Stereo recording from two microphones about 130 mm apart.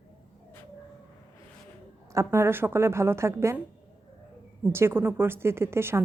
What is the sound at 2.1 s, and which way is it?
A woman's voice, 20° right (ahead or behind).